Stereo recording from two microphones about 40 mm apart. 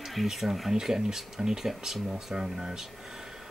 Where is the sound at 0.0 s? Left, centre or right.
Centre.